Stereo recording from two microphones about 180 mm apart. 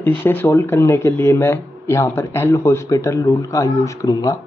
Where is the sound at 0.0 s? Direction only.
10° left (ahead or behind).